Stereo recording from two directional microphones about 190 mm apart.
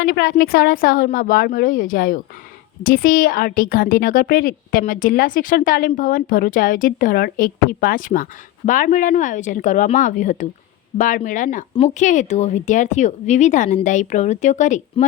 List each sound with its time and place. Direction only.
0.0 s a woman's voice: 55° left (ahead or behind); by 15.0 s 40° left (ahead or behind)